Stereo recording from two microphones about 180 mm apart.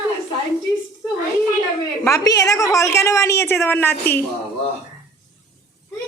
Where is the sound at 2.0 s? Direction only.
20° left (ahead or behind).